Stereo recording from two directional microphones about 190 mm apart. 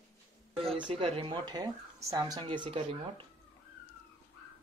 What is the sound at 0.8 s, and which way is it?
Speech, 25° right (ahead or behind).